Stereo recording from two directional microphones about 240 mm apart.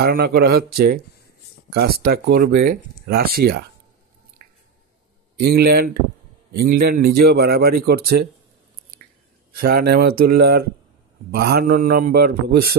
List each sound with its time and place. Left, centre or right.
0.0 s speech: right
4.4 s squish: right
5.4 s speech: right
9.5 s speech: right